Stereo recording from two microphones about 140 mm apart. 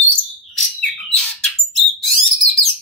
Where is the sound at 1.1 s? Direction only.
5° left (ahead or behind).